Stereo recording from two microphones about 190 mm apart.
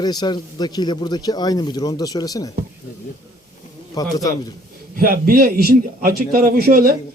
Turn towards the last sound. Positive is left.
turn(degrees=-50)  # may be behind; listen again after turning